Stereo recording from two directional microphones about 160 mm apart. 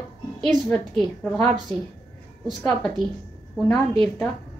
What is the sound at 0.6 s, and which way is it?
Speech, 5° left (ahead or behind).